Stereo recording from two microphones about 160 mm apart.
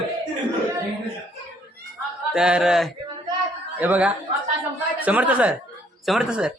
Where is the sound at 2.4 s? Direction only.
5° right (ahead or behind).